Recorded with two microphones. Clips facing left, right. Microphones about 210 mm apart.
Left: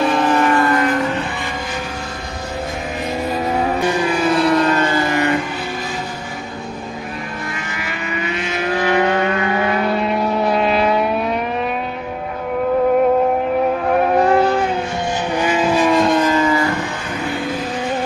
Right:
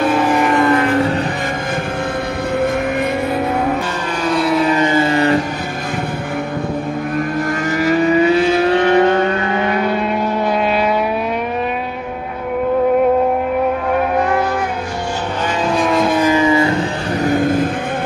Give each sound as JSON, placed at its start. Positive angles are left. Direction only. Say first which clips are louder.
{"t": 0.0, "sound": "vehicle", "louder": "right 1 dB", "side_deg": -10}
{"t": 4.2, "sound": "vehicle", "louder": "right 1 dB", "side_deg": 0}
{"t": 7.8, "sound": "vehicle", "louder": "right 14 dB", "side_deg": -40}
{"t": 9.8, "sound": "vehicle", "louder": "right 1 dB", "side_deg": 0}
{"t": 14.3, "sound": "vehicle", "louder": "left 3 dB", "side_deg": 30}
{"t": 15.4, "sound": "vehicle", "louder": "left 1 dB", "side_deg": 5}
{"t": 17.2, "sound": "vehicle", "louder": "right 8 dB", "side_deg": -45}